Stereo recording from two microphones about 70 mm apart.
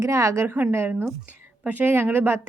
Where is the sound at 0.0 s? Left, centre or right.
Right.